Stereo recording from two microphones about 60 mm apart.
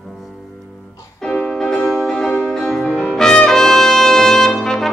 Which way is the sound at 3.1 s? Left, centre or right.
Centre.